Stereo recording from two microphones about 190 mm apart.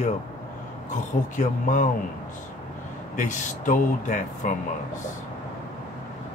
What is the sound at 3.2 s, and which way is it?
Speech, 40° left (ahead or behind).